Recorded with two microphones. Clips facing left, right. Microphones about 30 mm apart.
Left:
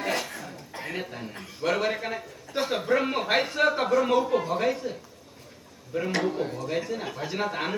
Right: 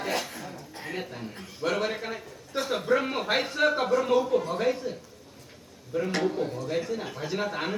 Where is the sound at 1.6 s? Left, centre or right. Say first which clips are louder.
Left 2 dB; centre.